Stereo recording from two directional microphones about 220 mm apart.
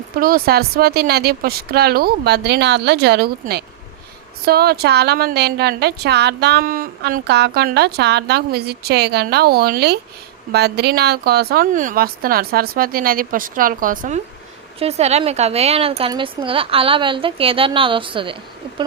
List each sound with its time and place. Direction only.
0.2 s a woman's voice: 40° right (ahead or behind); by 18.3 s 25° right (ahead or behind)